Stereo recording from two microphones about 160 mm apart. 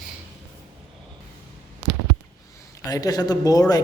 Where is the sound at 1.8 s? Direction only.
35° right (ahead or behind).